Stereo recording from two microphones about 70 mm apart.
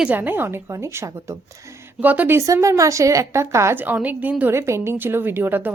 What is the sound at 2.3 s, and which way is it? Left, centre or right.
A woman's voice, right.